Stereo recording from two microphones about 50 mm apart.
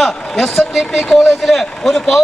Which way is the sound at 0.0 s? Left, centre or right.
Centre.